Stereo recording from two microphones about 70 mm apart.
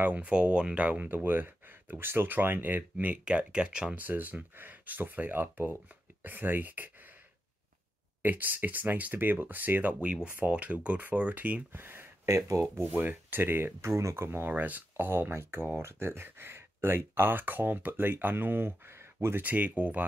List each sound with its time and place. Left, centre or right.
0.0 s speech: centre
3.9 s speech: right
8.2 s speech: right
12.4 s speech: right
12.8 s speech: right
13.7 s speech: right
19.4 s speech: right